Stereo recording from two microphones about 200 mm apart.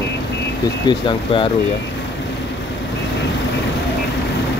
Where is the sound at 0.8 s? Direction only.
25° left (ahead or behind).